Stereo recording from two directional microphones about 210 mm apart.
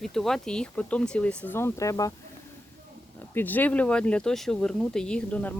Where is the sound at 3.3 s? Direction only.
10° left (ahead or behind).